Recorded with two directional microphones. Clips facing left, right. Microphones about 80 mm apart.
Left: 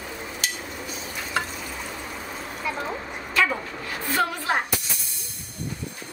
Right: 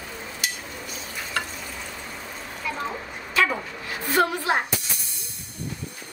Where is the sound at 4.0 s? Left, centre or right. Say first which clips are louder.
Right 3 dB; right.